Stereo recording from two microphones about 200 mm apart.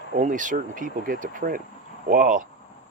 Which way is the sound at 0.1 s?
40° right (ahead or behind).